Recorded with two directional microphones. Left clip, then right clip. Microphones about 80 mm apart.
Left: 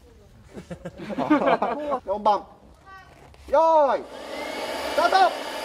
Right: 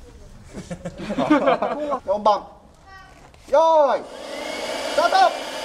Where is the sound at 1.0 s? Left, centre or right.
Right.